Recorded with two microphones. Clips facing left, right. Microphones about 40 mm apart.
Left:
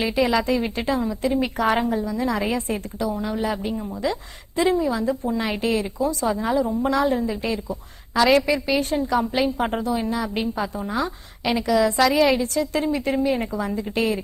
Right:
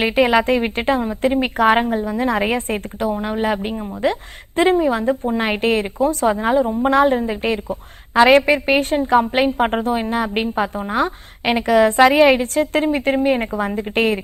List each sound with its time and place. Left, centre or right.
0.0 s a woman's voice: right